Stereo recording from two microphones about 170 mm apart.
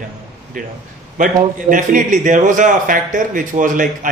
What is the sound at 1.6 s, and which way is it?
A man's voice, 50° right (ahead or behind).